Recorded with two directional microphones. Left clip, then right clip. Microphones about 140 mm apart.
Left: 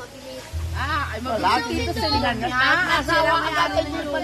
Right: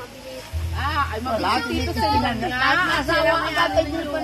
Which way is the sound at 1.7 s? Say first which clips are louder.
Right 1 dB; 10° left (ahead or behind).